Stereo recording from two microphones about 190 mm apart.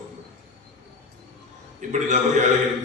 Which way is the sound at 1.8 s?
40° right (ahead or behind).